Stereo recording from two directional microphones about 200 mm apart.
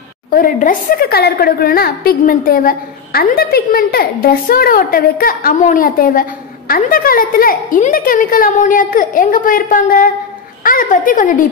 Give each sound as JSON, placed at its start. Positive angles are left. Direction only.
{"t": 0.3, "sound": "a woman's voice", "side_deg": 45}